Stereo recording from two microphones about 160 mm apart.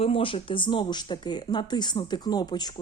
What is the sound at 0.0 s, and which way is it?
A woman's voice, 35° left (ahead or behind).